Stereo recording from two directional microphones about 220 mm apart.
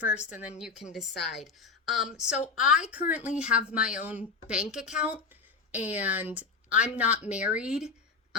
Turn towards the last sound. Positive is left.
turn(degrees=-5)  # may be behind; listen again after turning